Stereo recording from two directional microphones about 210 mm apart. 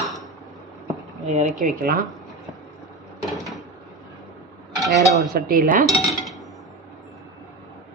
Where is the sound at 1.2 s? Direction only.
35° right (ahead or behind).